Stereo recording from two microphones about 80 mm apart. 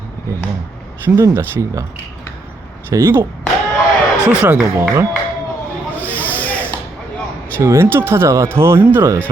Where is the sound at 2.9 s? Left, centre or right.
Right.